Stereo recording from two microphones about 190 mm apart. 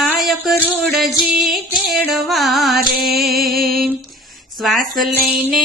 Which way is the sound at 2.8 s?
55° right (ahead or behind).